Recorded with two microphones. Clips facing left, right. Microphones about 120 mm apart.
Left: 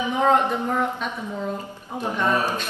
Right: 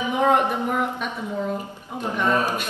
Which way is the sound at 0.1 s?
10° right (ahead or behind).